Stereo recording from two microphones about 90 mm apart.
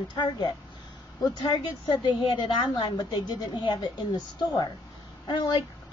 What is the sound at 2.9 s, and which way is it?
A woman's voice, 50° left (ahead or behind).